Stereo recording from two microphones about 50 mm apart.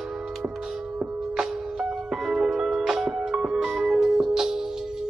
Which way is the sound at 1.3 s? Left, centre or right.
Centre.